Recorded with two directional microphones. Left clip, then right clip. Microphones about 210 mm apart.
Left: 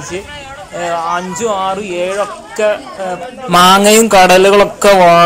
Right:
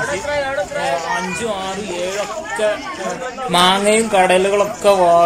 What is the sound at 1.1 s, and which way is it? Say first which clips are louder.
Speech: left 5 dB; 20° left (ahead or behind).